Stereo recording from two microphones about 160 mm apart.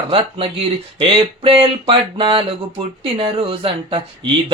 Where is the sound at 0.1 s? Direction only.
35° right (ahead or behind).